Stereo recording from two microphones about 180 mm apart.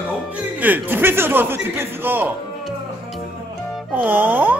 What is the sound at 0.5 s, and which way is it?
A man's voice, 10° right (ahead or behind).